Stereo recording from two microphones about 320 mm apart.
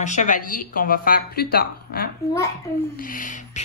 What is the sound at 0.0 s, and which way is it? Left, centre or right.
Speech, left.